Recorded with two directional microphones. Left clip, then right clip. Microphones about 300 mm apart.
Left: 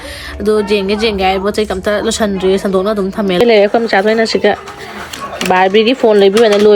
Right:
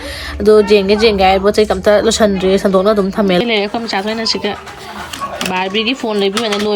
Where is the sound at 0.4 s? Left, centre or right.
Centre.